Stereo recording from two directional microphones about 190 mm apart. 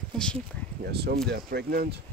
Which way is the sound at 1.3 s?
55° right (ahead or behind).